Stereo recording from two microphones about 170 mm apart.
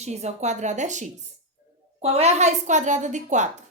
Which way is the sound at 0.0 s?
40° right (ahead or behind).